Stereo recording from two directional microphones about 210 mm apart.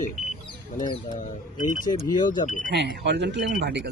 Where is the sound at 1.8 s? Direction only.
20° left (ahead or behind).